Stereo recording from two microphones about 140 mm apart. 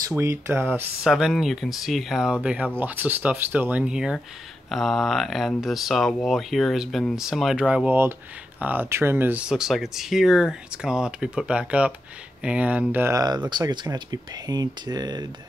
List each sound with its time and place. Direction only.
0.1 s speech: 20° right (ahead or behind)
1.0 s speech: centre (ahead or behind)
13.5 s speech: 30° right (ahead or behind)